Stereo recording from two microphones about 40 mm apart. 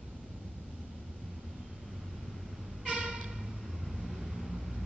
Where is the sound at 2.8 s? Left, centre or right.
Right.